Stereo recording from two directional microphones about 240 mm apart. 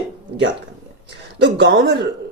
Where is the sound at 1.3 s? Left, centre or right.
Right.